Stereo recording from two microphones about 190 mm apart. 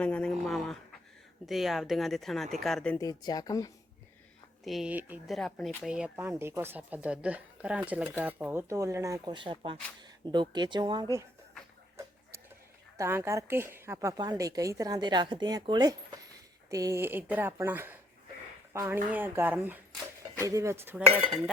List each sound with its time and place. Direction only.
0.0 s a sound: 5° left (ahead or behind)
1.5 s speech: centre (ahead or behind)
3.0 s speech: 20° left (ahead or behind)
4.6 s speech: centre (ahead or behind); by 11.1 s 25° right (ahead or behind)
13.0 s speech: 15° right (ahead or behind)